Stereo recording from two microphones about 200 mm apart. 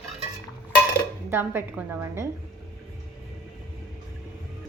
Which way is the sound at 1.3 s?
10° right (ahead or behind).